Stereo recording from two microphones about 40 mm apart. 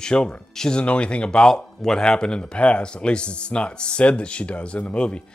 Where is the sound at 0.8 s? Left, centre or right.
Left.